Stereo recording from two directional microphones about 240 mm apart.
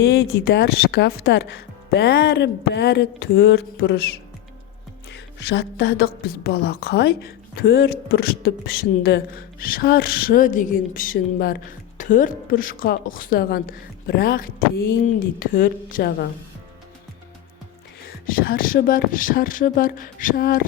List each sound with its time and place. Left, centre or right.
0.0 s speech: left
5.1 s a woman's voice: left
18.3 s a woman's voice: left